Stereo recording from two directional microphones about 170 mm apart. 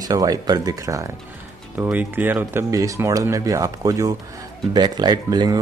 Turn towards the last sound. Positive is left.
turn(degrees=-25)  # may be behind; listen again after turning